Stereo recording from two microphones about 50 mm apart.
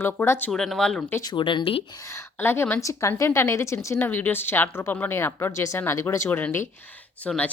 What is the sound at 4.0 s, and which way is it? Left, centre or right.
A woman's voice, left.